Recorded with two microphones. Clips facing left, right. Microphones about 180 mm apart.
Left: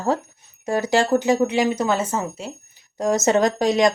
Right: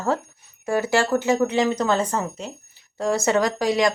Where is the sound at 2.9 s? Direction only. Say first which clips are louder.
Left 2 dB; 20° left (ahead or behind).